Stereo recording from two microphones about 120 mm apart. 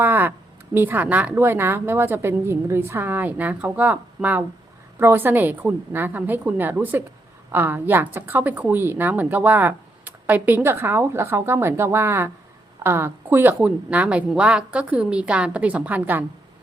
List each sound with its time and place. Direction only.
0.0 s speech: 15° right (ahead or behind)